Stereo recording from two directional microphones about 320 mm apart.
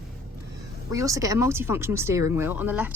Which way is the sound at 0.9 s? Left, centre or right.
Centre.